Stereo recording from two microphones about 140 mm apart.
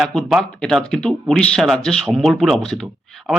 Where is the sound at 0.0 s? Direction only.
5° left (ahead or behind).